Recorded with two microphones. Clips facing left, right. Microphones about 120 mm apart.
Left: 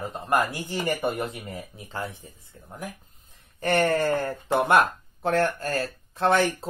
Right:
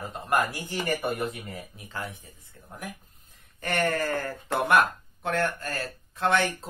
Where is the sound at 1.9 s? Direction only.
30° left (ahead or behind).